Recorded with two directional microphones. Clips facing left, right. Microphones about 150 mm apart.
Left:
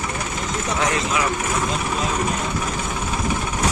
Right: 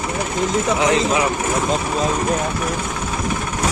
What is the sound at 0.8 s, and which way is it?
Speech, 20° right (ahead or behind).